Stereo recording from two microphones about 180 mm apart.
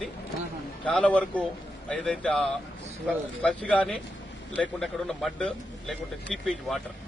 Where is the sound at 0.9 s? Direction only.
5° left (ahead or behind).